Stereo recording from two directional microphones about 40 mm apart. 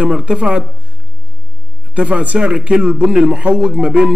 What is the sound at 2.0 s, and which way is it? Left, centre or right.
A man's voice, right.